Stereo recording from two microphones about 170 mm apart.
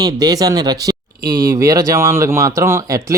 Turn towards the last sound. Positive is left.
turn(degrees=-20)  # may be behind; listen again after turning